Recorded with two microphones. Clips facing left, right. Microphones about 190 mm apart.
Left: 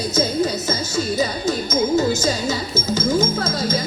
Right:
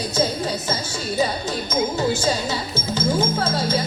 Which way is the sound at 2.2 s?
45° left (ahead or behind).